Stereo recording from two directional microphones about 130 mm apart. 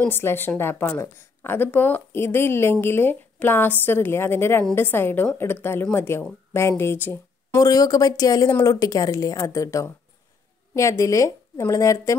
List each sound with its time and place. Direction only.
0.0 s a woman's voice: 15° left (ahead or behind)
7.6 s speech: 30° left (ahead or behind)